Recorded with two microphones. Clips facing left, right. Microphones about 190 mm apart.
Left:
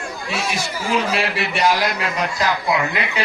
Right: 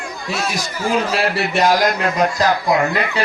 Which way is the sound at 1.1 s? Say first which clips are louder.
Right 4 dB; 40° right (ahead or behind).